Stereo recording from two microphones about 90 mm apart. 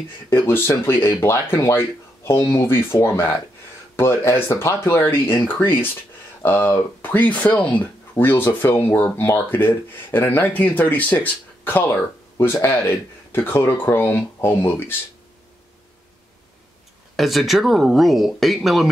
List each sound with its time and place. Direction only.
0.3 s speech: 25° left (ahead or behind)
17.2 s speech: centre (ahead or behind)